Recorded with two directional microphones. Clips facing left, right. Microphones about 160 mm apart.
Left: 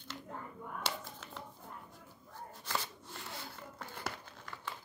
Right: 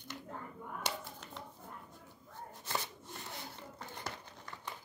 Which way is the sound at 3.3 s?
20° right (ahead or behind).